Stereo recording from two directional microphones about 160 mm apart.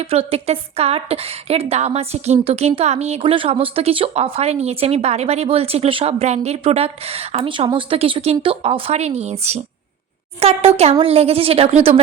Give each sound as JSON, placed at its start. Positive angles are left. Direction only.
{"t": 0.1, "sound": "a woman's voice", "side_deg": -40}